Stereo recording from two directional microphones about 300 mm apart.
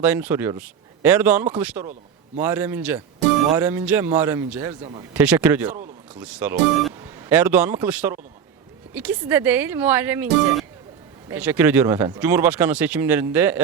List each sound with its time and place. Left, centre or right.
0.0 s speech: centre
5.2 s speech: centre